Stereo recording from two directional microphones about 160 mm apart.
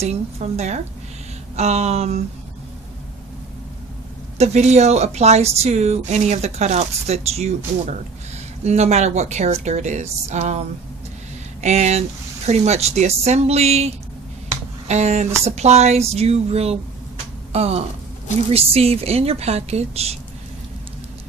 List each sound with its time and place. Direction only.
0.0 s a woman's voice: 40° right (ahead or behind)
4.4 s a woman's voice: 45° right (ahead or behind)